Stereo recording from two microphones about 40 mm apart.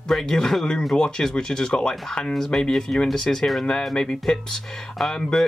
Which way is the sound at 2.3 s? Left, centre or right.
Centre.